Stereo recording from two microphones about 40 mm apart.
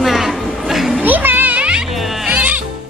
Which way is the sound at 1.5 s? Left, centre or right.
Right.